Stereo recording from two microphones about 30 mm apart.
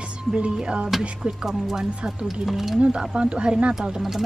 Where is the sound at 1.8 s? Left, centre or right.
Right.